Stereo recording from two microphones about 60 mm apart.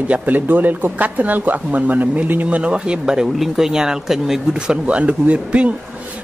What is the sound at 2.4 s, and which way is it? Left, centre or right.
Speech, centre.